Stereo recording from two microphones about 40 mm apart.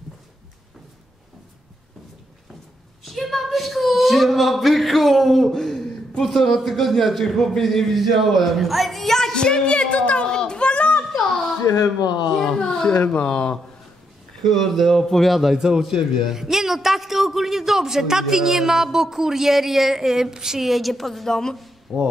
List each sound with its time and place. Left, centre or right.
3.0 s speech: centre
5.5 s a sound: centre
6.2 s a man's voice: centre; by 10.2 s left
10.2 s a sound: centre; by 11.1 s left
12.5 s speech: left
13.0 s speech: left
13.3 s speech: left
14.4 s speech: centre
15.5 s a man's voice: centre
21.9 s speech: centre